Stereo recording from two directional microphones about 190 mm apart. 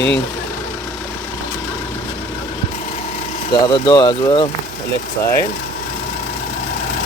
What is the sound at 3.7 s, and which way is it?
Speech, 20° left (ahead or behind).